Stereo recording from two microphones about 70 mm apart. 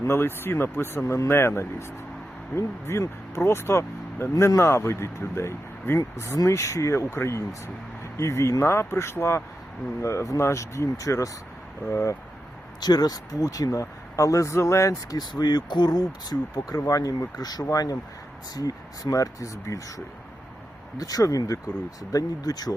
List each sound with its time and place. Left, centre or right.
0.0 s speech: left
12.8 s speech: left
15.2 s speech: left
21.0 s speech: left